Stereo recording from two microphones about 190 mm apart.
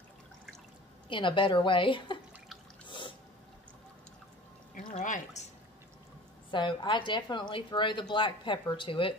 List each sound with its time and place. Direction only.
1.0 s a woman's voice: 25° left (ahead or behind)
4.7 s pour: 40° left (ahead or behind)
6.5 s a woman's voice: 25° left (ahead or behind)